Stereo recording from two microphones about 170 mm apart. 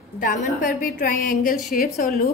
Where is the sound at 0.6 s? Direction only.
55° left (ahead or behind).